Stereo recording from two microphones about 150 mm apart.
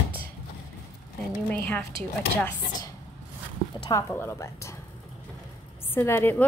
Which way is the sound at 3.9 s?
20° left (ahead or behind).